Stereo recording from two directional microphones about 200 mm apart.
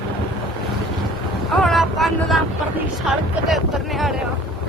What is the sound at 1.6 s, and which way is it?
Speech, centre (ahead or behind).